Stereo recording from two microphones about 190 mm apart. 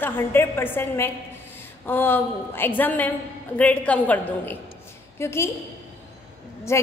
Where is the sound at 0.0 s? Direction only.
10° left (ahead or behind).